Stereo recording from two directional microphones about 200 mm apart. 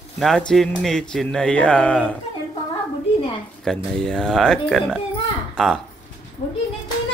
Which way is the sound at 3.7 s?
5° left (ahead or behind).